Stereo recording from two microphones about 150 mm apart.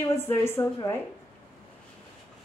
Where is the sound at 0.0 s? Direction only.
15° left (ahead or behind).